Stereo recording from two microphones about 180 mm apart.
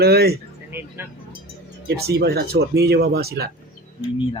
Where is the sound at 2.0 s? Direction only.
60° right (ahead or behind).